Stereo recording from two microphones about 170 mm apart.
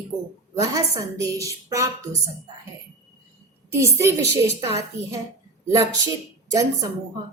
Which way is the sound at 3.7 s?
15° right (ahead or behind).